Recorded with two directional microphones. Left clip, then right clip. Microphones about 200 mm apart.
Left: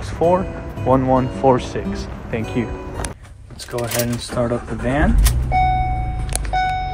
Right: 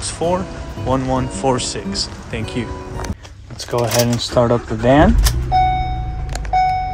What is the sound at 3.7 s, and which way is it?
Speech, 30° right (ahead or behind).